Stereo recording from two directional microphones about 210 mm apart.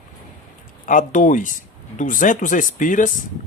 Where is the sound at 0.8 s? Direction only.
40° left (ahead or behind).